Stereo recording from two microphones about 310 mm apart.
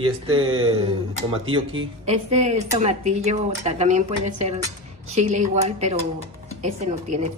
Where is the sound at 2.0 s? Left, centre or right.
Right.